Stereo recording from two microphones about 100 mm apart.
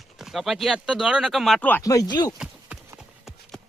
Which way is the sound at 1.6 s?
15° left (ahead or behind).